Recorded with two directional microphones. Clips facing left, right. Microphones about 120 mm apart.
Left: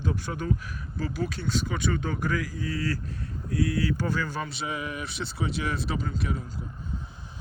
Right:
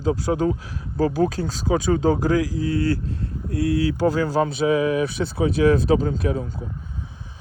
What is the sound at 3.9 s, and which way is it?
Speech, 30° right (ahead or behind).